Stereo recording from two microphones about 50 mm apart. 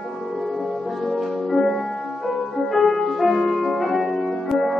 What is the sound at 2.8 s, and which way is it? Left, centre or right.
Music, centre.